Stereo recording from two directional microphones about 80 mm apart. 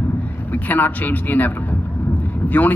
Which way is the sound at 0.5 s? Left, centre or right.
Left.